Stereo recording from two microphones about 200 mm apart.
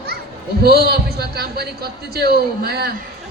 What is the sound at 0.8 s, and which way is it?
A woman's voice, 50° right (ahead or behind).